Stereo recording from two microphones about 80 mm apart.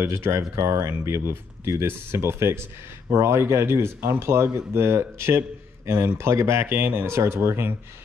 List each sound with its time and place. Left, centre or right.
0.0 s speech: right